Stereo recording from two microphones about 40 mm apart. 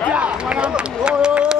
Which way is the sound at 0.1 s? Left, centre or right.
Right.